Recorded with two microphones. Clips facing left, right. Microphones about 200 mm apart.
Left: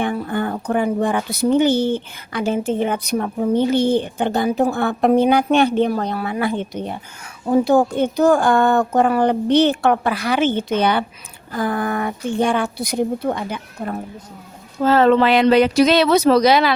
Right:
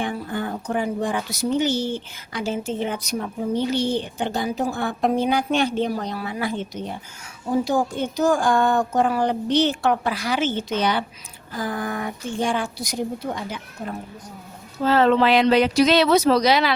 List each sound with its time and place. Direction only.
0.0 s speech: 60° left (ahead or behind)